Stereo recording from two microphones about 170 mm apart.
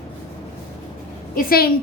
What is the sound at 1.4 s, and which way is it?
Speech, 60° left (ahead or behind).